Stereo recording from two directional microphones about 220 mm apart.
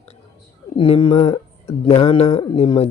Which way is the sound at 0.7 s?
25° left (ahead or behind).